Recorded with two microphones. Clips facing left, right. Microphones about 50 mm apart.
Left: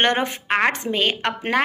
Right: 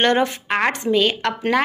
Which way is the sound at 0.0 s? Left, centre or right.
Left.